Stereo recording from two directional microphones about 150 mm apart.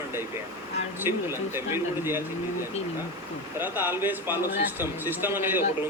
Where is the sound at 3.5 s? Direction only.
15° right (ahead or behind).